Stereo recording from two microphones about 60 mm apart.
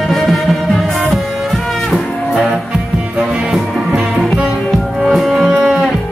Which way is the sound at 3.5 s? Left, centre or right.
Centre.